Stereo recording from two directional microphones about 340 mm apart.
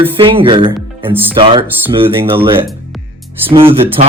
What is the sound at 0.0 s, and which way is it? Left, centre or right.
A man's voice, centre.